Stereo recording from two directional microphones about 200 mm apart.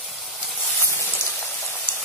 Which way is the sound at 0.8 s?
10° left (ahead or behind).